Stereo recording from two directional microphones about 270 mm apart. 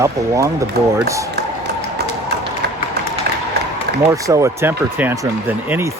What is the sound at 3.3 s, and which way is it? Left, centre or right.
Applause, right.